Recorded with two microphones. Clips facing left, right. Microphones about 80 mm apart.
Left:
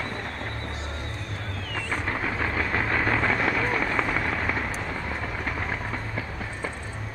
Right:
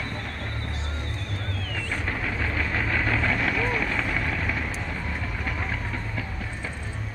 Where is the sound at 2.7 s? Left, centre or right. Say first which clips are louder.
Left 2 dB; left.